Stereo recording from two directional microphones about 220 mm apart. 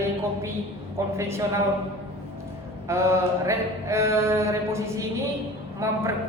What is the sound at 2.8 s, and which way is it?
A woman's voice, 10° right (ahead or behind).